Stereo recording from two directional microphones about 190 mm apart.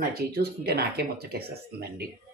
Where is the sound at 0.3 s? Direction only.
55° right (ahead or behind).